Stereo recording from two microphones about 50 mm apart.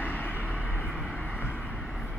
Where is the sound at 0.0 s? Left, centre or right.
Left.